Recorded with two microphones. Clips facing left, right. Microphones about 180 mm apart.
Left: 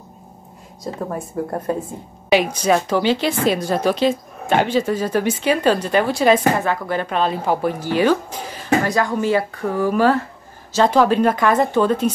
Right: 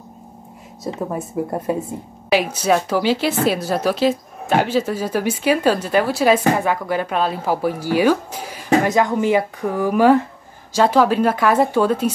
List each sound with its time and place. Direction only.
1.1 s a woman's voice: 10° right (ahead or behind)
8.8 s a woman's voice: 20° right (ahead or behind)